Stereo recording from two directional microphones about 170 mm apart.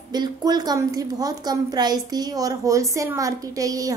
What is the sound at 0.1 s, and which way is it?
A woman's voice, 25° right (ahead or behind).